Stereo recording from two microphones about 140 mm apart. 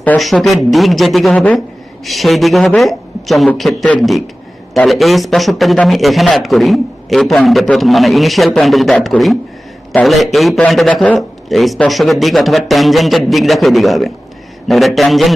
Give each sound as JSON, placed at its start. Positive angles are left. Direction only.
{"t": 0.2, "sound": "a man's voice", "side_deg": 0}